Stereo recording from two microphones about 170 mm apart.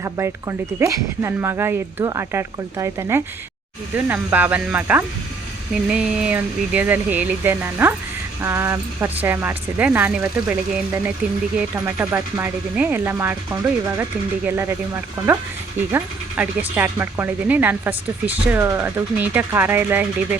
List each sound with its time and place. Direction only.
0.0 s speech: 15° right (ahead or behind)
15.9 s speech: 10° right (ahead or behind)